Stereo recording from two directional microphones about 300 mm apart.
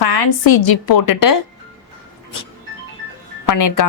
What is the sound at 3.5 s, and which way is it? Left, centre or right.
Speech, left.